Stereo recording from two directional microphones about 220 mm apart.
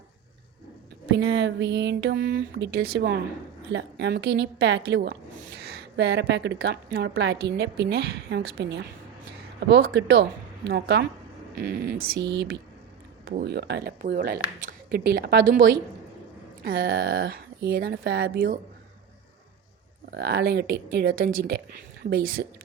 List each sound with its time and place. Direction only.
1.1 s a woman's voice: 50° right (ahead or behind)
16.6 s a woman's voice: 45° right (ahead or behind)
20.1 s a woman's voice: 50° right (ahead or behind)